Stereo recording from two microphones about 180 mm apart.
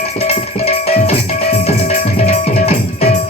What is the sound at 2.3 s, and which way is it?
Music, 35° left (ahead or behind).